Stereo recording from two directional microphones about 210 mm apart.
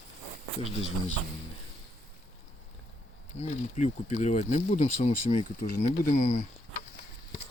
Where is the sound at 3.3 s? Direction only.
35° left (ahead or behind).